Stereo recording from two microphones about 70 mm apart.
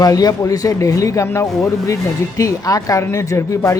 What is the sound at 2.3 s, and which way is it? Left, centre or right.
Speech, left.